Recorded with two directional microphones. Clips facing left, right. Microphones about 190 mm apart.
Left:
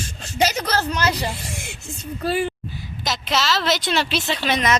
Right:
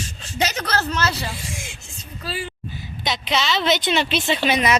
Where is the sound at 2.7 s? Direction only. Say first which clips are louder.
Right 1 dB; centre (ahead or behind).